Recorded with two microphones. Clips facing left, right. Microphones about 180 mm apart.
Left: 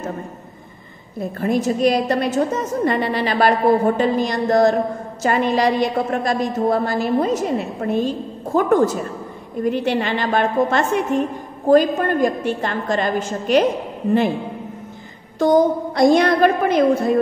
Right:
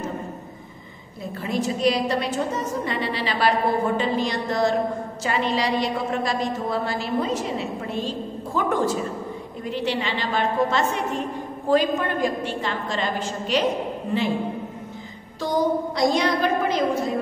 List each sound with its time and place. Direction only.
1.4 s a woman's voice: 50° left (ahead or behind)
15.3 s a woman's voice: 50° left (ahead or behind)